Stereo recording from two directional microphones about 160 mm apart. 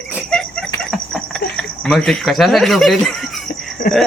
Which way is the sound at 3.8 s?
65° left (ahead or behind).